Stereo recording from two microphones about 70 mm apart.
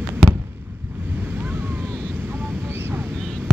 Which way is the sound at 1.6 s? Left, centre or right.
Right.